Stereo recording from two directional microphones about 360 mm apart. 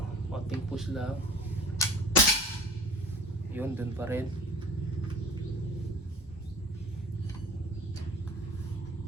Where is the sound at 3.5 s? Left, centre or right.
Centre.